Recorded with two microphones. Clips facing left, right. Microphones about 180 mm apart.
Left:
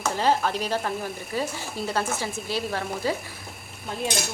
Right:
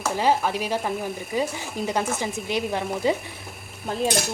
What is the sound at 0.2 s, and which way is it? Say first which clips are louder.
Speech: right 1 dB; 10° right (ahead or behind).